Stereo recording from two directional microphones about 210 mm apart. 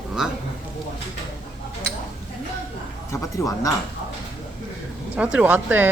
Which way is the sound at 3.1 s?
15° left (ahead or behind).